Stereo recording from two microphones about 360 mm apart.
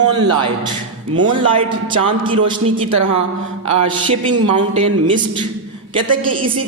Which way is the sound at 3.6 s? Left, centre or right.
Centre.